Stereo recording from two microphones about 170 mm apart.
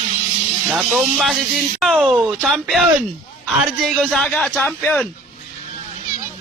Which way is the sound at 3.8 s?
Centre (ahead or behind).